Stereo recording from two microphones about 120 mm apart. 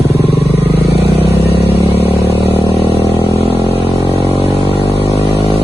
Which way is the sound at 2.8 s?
50° left (ahead or behind).